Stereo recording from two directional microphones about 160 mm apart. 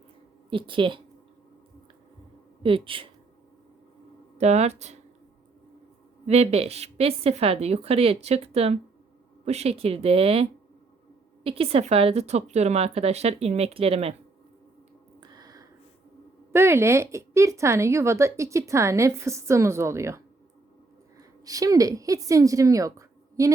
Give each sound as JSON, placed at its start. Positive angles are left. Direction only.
{"t": 0.5, "sound": "speech", "side_deg": -30}
{"t": 2.6, "sound": "speech", "side_deg": -35}
{"t": 4.4, "sound": "speech", "side_deg": -45}
{"t": 6.2, "sound": "speech", "side_deg": -40}
{"t": 15.2, "sound": "a sound", "side_deg": -25}
{"t": 16.5, "sound": "a woman's voice", "side_deg": -15}